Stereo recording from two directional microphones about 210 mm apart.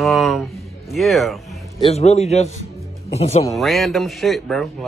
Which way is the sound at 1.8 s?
30° left (ahead or behind).